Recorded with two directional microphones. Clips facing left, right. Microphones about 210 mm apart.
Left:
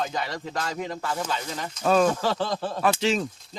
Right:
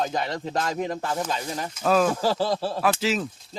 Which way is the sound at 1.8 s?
Centre (ahead or behind).